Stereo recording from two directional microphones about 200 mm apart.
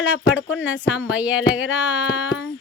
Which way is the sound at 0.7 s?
5° right (ahead or behind).